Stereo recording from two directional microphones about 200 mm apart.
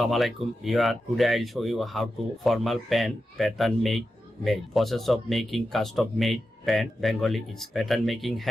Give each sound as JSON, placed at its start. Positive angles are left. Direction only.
{"t": 0.0, "sound": "speech", "side_deg": 0}